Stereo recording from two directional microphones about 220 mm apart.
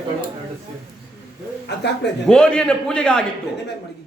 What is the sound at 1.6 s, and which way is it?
Speech, 50° left (ahead or behind).